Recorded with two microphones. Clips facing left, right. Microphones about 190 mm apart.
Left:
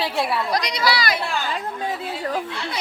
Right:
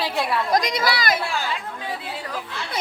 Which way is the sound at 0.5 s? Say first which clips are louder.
Right 1 dB; 50° right (ahead or behind).